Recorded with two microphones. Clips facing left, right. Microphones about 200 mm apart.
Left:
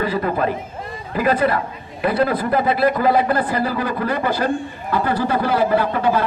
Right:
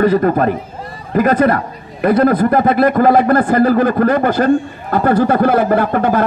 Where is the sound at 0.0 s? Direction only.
50° right (ahead or behind).